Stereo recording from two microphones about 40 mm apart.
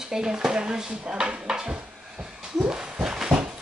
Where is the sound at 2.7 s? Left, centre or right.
Centre.